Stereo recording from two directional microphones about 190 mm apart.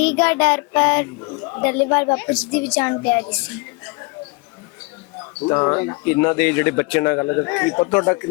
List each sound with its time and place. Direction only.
0.0 s speech: 5° left (ahead or behind)
5.5 s speech: 15° left (ahead or behind)